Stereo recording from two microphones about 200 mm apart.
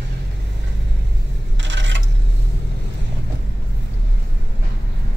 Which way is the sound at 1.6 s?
65° right (ahead or behind).